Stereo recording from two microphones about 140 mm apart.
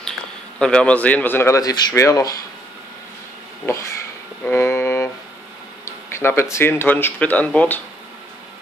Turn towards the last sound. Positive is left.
turn(degrees=10)  # may be behind; listen again after turning